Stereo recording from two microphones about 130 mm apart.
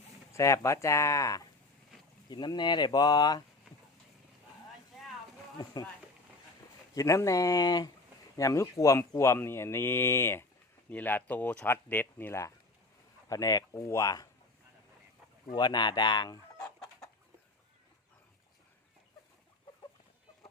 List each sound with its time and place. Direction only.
0.3 s speech: 20° left (ahead or behind)
6.9 s speech: 25° left (ahead or behind)
15.5 s speech: 35° left (ahead or behind)
16.6 s chicken: 5° left (ahead or behind)